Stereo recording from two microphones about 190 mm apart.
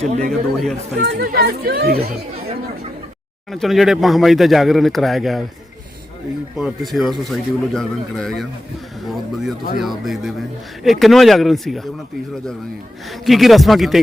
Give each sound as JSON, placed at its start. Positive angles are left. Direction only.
{"t": 0.3, "sound": "speech", "side_deg": 0}
{"t": 0.9, "sound": "speech", "side_deg": -60}
{"t": 3.5, "sound": "speech", "side_deg": 0}
{"t": 6.6, "sound": "speech", "side_deg": 0}
{"t": 13.1, "sound": "speech", "side_deg": 0}